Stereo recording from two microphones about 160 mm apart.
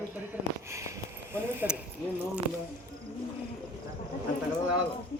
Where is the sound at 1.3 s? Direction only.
15° right (ahead or behind).